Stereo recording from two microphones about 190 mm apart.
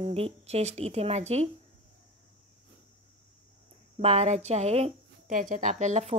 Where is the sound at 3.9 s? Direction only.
35° right (ahead or behind).